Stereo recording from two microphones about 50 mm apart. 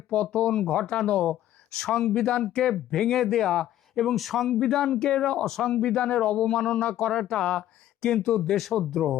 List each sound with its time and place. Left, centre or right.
0.3 s speech: left
1.8 s speech: centre